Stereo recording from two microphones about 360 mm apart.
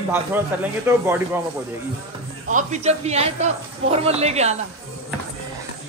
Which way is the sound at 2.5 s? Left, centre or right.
Centre.